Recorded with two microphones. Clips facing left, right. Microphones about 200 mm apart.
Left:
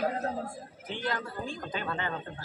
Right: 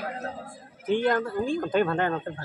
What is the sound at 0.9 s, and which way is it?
Speech, 50° right (ahead or behind).